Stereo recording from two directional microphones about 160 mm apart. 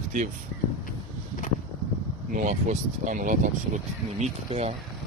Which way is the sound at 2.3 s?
50° right (ahead or behind).